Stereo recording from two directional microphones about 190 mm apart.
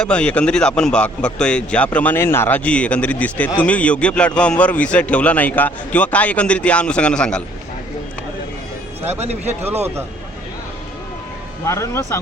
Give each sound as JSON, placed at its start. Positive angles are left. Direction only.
{"t": 0.0, "sound": "a man's voice", "side_deg": 5}
{"t": 9.1, "sound": "speech", "side_deg": -35}
{"t": 11.6, "sound": "a man's voice", "side_deg": 15}